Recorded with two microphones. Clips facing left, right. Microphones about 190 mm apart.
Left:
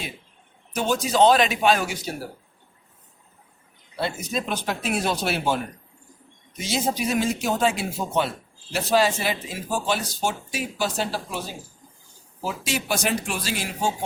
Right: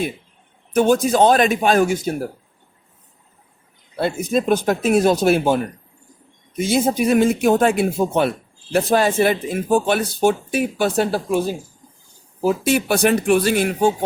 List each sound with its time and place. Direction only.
0.7 s speech: 55° right (ahead or behind)
3.9 s speech: 50° right (ahead or behind)
6.6 s speech: 55° right (ahead or behind)